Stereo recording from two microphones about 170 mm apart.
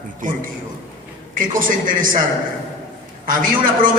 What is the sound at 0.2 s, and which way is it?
A man's voice, 50° right (ahead or behind).